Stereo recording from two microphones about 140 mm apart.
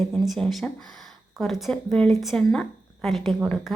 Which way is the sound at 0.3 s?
Centre (ahead or behind).